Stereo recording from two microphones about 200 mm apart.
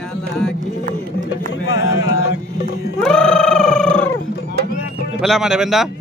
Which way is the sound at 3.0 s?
5° left (ahead or behind).